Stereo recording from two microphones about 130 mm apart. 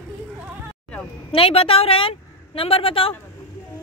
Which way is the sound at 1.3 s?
45° left (ahead or behind).